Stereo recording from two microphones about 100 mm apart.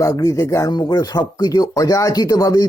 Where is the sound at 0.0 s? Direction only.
35° left (ahead or behind).